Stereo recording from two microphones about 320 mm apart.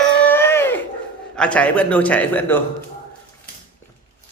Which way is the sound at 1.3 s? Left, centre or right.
Centre.